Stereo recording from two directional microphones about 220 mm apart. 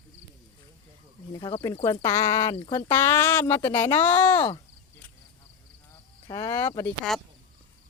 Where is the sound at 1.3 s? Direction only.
20° left (ahead or behind).